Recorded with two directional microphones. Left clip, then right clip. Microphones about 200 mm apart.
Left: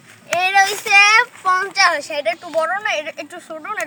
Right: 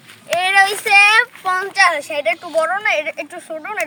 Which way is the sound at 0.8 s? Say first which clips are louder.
Left 1 dB; 10° right (ahead or behind).